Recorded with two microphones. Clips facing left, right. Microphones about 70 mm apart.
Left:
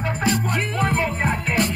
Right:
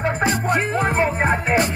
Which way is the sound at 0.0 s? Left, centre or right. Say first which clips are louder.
Right 2 dB; right.